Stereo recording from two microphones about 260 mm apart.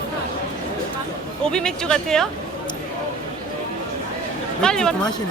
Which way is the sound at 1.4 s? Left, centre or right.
Centre.